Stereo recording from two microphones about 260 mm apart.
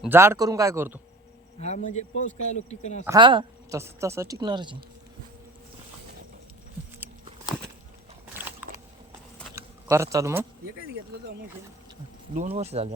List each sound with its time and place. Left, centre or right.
0.0 s speech: centre
1.5 s a man's voice: left
3.1 s speech: centre
8.4 s a sound: centre
10.9 s speech: right
12.5 s speech: right